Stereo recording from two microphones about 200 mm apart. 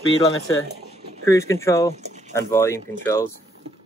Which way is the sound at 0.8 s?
35° right (ahead or behind).